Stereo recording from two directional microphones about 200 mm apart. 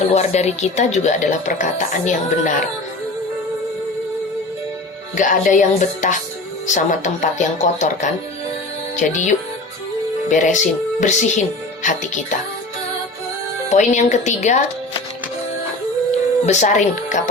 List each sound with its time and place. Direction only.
0.0 s speech: 35° left (ahead or behind)
5.1 s speech: 40° left (ahead or behind)
13.7 s speech: 35° left (ahead or behind)
16.5 s speech: 35° left (ahead or behind)